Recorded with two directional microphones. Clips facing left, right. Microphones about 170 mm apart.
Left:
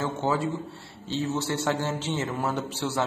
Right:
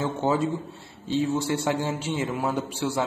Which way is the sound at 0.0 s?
20° right (ahead or behind).